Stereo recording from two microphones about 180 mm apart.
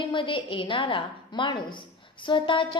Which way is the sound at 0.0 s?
25° left (ahead or behind).